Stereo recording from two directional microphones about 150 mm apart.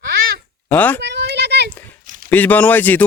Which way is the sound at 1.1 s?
90° right.